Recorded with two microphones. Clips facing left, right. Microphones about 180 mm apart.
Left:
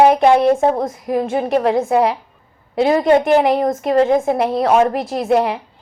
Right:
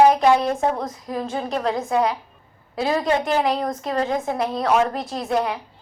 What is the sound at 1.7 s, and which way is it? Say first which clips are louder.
A woman's voice: left 6 dB; 30° left (ahead or behind).